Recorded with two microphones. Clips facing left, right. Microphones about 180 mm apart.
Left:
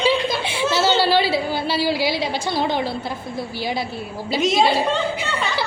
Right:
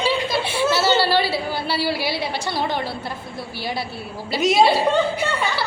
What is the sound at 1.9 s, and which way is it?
Speech, 90° left.